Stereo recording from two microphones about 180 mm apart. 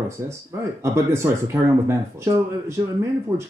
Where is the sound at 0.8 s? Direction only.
15° right (ahead or behind).